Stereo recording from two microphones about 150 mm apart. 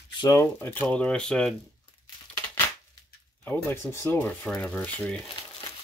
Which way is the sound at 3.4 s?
10° left (ahead or behind).